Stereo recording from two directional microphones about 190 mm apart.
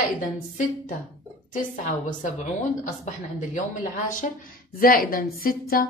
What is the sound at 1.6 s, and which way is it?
Speech, 40° left (ahead or behind).